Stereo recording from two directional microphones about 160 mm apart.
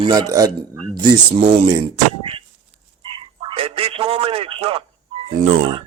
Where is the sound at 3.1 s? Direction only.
35° right (ahead or behind).